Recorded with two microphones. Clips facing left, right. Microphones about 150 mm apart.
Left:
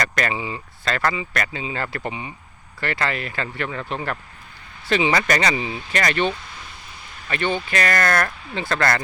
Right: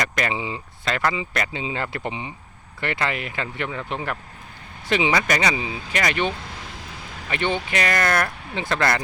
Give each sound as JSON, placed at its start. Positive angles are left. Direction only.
{"t": 0.0, "sound": "speech", "side_deg": -20}
{"t": 6.5, "sound": "vehicle", "side_deg": -90}
{"t": 7.3, "sound": "speech", "side_deg": -20}